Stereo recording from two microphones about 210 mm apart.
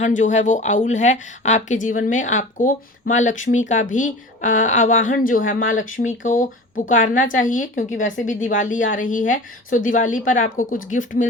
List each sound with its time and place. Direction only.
0.0 s a woman's voice: 35° left (ahead or behind)
7.9 s speech: 65° left (ahead or behind)
8.2 s a woman's voice: 40° left (ahead or behind)